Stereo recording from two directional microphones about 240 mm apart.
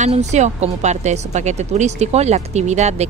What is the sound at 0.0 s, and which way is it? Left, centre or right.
A woman's voice, right.